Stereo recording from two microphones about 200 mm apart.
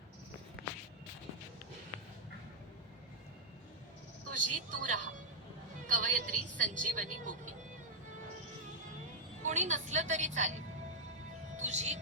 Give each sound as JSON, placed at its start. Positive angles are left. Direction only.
{"t": 4.3, "sound": "a woman's voice", "side_deg": -40}
{"t": 9.4, "sound": "a woman's voice", "side_deg": -35}
{"t": 11.5, "sound": "speech", "side_deg": -35}